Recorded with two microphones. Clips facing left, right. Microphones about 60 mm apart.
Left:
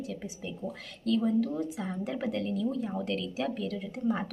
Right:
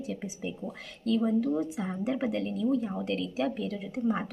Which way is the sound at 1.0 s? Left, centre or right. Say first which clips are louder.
Right 1 dB; centre.